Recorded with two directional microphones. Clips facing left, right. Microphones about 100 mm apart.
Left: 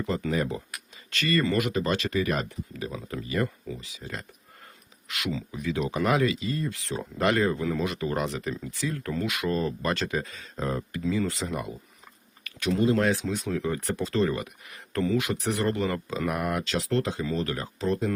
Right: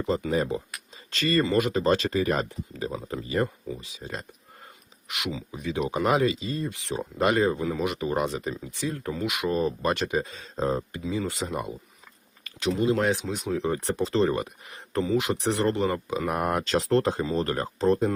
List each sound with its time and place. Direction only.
0.0 s speech: 20° right (ahead or behind)
7.9 s speech: 20° right (ahead or behind)
12.5 s a sound: 25° right (ahead or behind)
12.7 s speech: 15° right (ahead or behind)
16.3 s speech: 40° right (ahead or behind)